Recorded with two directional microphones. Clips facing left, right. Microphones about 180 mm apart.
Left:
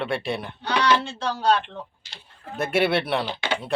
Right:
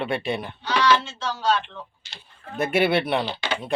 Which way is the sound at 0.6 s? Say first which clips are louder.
Right 1 dB; 55° left (ahead or behind).